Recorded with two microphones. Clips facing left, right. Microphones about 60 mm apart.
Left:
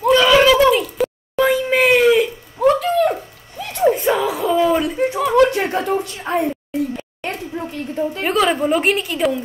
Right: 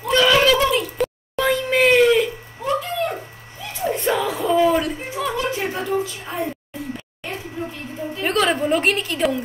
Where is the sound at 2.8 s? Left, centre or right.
Left.